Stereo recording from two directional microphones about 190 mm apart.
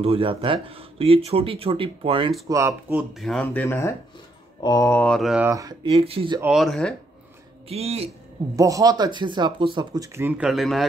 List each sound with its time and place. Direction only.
0.0 s speech: 30° right (ahead or behind)
2.4 s speech: 15° right (ahead or behind)
5.5 s speech: 15° right (ahead or behind)
5.9 s speech: 30° right (ahead or behind)
6.4 s speech: centre (ahead or behind)
7.6 s speech: 35° right (ahead or behind)
8.5 s speech: 15° right (ahead or behind); by 10.9 s centre (ahead or behind)